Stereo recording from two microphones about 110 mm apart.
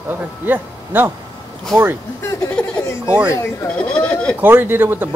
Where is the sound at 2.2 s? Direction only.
30° left (ahead or behind).